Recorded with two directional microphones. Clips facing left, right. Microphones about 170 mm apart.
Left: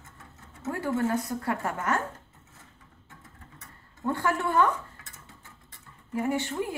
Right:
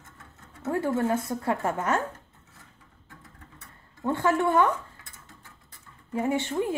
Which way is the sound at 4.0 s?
20° right (ahead or behind).